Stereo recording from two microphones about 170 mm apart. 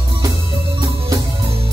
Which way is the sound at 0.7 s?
25° right (ahead or behind).